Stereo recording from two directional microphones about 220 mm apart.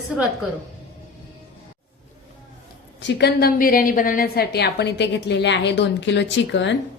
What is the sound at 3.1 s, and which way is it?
A woman's voice, 50° left (ahead or behind).